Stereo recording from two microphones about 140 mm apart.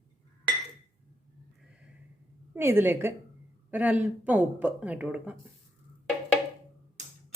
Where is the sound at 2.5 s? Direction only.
15° right (ahead or behind).